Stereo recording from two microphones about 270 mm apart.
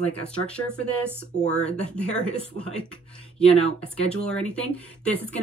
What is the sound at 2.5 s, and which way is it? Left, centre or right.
Speech, centre.